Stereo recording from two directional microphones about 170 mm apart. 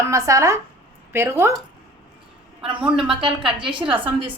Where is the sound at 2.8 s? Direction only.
5° right (ahead or behind).